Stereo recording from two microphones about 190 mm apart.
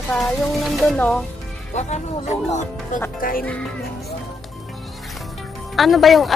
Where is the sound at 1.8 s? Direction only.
35° left (ahead or behind).